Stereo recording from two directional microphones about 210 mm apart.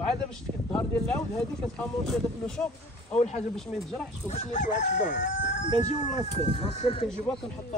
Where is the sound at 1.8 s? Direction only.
5° left (ahead or behind).